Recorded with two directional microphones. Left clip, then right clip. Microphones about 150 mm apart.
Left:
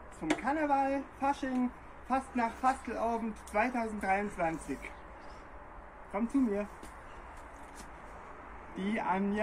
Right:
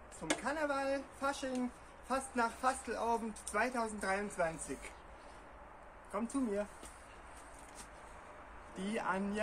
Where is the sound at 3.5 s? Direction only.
30° right (ahead or behind).